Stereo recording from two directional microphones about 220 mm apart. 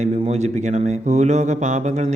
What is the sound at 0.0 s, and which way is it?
Speech, 30° right (ahead or behind).